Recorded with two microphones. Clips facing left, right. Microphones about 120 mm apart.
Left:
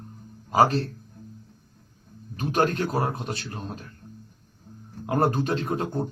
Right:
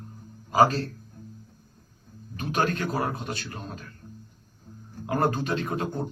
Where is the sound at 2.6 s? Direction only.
30° left (ahead or behind).